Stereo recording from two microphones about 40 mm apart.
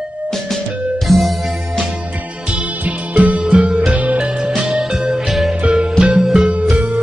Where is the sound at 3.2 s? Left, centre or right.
Right.